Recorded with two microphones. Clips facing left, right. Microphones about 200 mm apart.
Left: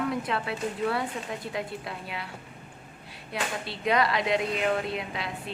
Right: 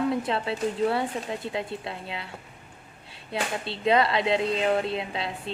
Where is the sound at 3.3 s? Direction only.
25° right (ahead or behind).